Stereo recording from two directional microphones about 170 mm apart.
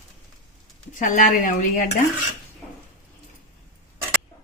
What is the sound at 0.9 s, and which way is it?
Speech, 50° left (ahead or behind).